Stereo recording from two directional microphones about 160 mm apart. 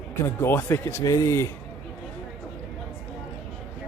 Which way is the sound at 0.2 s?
15° left (ahead or behind).